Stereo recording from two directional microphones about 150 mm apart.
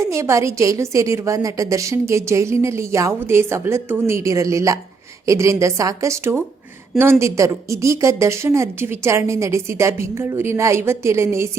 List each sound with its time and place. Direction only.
0.0 s a woman's voice: 20° right (ahead or behind)